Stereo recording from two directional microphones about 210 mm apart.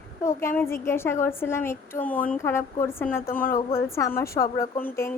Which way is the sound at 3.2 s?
40° left (ahead or behind).